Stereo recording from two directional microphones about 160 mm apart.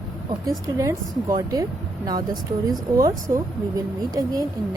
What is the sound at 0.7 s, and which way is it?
Speech, 20° right (ahead or behind).